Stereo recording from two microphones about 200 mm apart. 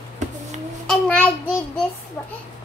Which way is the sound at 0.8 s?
5° left (ahead or behind).